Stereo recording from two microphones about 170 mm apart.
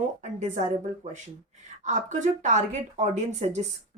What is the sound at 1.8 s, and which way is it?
Speech, 45° right (ahead or behind).